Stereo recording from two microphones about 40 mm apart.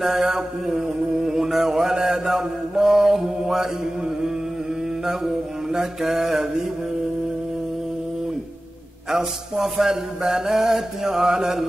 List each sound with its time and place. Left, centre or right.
0.0 s mantra: centre
5.0 s mantra: centre
9.1 s mantra: centre